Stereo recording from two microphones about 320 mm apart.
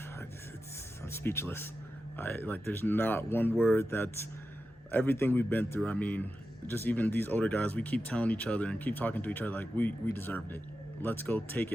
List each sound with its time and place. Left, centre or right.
1.0 s speech: centre